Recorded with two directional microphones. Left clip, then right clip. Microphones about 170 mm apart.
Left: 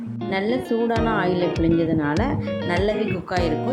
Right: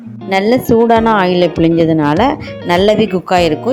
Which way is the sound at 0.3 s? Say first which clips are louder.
Right 12 dB; 45° right (ahead or behind).